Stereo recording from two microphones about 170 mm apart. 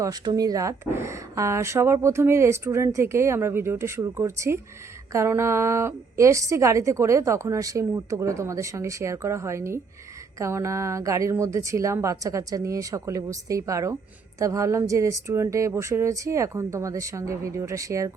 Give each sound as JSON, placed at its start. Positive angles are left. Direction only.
{"t": 0.0, "sound": "a woman's voice", "side_deg": -20}